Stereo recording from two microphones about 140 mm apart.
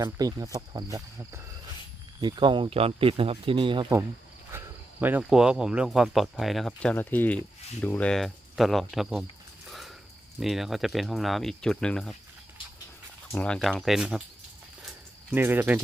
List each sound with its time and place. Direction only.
0.0 s speech: 25° right (ahead or behind)
2.2 s speech: 35° right (ahead or behind)
4.5 s speech: 15° right (ahead or behind)
9.6 s a sound: centre (ahead or behind)
10.4 s speech: centre (ahead or behind)
13.3 s speech: 5° left (ahead or behind)
15.3 s speech: 15° right (ahead or behind)